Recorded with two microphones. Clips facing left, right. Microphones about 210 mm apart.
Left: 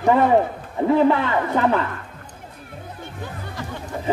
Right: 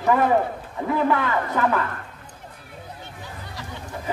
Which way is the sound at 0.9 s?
25° left (ahead or behind).